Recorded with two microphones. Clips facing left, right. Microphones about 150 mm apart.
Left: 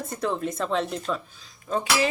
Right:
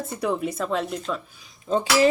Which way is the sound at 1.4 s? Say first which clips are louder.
Right 7 dB; 20° right (ahead or behind).